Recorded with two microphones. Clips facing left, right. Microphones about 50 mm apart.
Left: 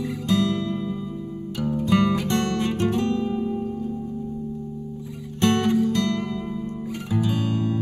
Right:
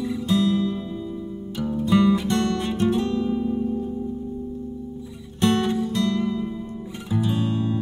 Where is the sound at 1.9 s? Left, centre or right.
Left.